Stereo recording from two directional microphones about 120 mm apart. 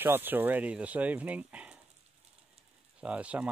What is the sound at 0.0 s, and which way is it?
Speech, 15° right (ahead or behind).